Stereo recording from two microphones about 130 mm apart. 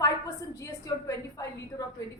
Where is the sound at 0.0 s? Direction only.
25° left (ahead or behind).